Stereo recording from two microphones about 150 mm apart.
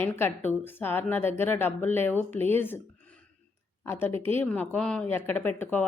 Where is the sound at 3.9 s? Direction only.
15° left (ahead or behind).